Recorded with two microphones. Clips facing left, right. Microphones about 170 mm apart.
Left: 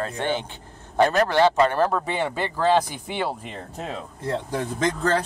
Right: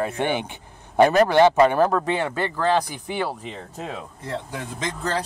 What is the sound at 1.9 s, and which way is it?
Speech, 5° left (ahead or behind).